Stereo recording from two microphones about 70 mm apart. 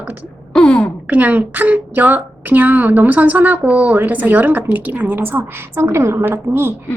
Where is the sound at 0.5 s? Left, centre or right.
Centre.